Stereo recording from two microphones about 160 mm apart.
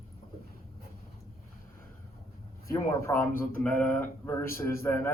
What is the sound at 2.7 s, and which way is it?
Speech, 15° left (ahead or behind).